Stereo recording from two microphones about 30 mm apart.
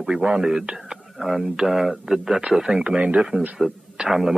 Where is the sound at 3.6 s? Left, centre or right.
Centre.